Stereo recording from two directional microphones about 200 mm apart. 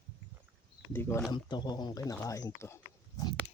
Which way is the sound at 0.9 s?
10° left (ahead or behind).